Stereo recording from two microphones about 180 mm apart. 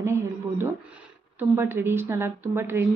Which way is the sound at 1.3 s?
10° right (ahead or behind).